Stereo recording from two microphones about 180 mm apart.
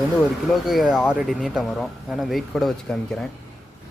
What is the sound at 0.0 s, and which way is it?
Speech, centre (ahead or behind).